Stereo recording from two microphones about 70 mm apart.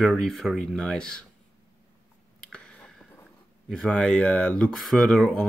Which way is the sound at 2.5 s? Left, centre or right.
Centre.